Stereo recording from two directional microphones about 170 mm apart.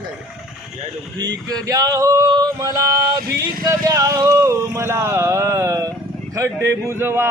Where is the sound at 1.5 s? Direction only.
20° right (ahead or behind).